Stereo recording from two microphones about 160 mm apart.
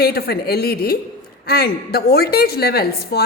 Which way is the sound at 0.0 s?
75° left (ahead or behind).